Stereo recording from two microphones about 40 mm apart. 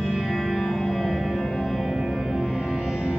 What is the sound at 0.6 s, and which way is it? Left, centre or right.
Music, centre.